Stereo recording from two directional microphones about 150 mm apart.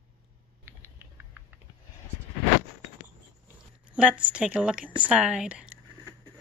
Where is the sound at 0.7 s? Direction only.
15° right (ahead or behind).